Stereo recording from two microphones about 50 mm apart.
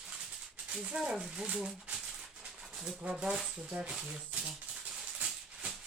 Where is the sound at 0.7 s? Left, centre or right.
Centre.